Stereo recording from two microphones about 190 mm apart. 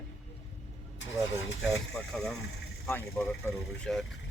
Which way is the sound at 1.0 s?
75° left (ahead or behind).